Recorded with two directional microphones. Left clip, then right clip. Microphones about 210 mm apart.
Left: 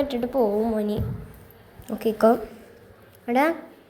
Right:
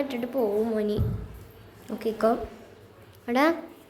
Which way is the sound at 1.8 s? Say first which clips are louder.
Left 5 dB; 15° left (ahead or behind).